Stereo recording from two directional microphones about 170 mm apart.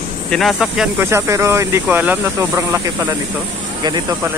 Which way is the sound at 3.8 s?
25° right (ahead or behind).